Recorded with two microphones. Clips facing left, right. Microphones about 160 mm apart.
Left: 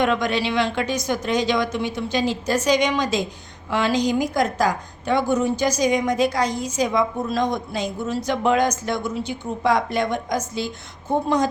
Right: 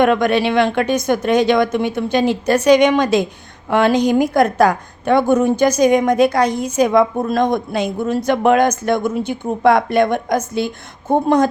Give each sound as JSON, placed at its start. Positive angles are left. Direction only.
{"t": 0.0, "sound": "a woman's voice", "side_deg": -55}